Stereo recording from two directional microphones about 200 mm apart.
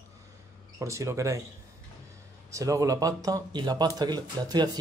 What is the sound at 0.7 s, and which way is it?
Speech, 15° right (ahead or behind).